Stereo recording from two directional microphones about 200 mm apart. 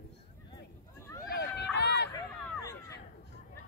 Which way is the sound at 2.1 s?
15° left (ahead or behind).